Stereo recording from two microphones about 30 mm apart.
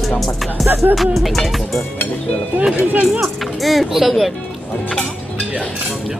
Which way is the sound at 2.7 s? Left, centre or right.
Right.